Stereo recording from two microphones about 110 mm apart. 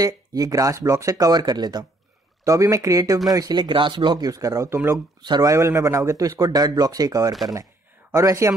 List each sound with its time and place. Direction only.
0.0 s speech: 30° right (ahead or behind)